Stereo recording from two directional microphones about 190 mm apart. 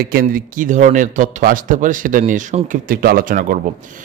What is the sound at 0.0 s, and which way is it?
Speech, 50° right (ahead or behind).